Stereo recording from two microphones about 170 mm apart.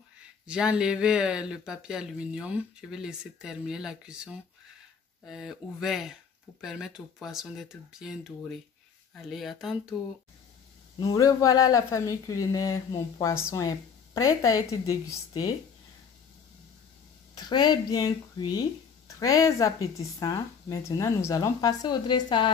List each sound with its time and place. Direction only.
0.5 s speech: 5° right (ahead or behind)
11.1 s speech: 20° left (ahead or behind)
17.4 s speech: 25° left (ahead or behind)